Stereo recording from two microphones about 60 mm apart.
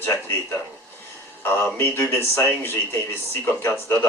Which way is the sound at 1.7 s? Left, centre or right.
Left.